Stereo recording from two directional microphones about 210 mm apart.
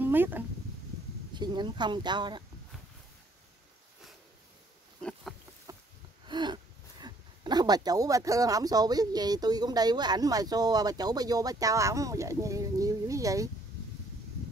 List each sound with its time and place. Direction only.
0.0 s speech: 10° right (ahead or behind)
1.3 s speech: 20° right (ahead or behind)
5.7 s a sound: 15° right (ahead or behind)
6.2 s speech: 20° right (ahead or behind)